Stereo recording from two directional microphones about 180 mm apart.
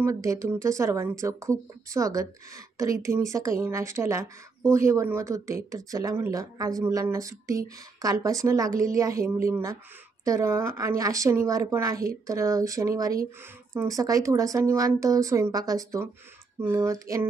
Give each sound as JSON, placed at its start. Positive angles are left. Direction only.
{"t": 0.0, "sound": "a woman's voice", "side_deg": -15}